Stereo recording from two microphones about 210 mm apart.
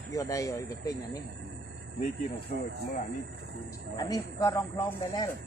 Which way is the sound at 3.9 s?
15° left (ahead or behind).